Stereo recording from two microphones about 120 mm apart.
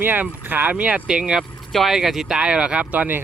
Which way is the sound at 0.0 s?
15° right (ahead or behind).